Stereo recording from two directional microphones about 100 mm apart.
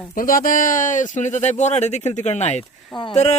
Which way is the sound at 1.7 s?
90° left.